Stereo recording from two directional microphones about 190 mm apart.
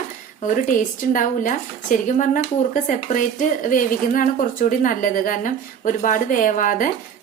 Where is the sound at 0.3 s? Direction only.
45° left (ahead or behind).